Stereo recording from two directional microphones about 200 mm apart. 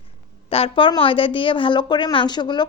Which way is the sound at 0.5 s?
25° left (ahead or behind).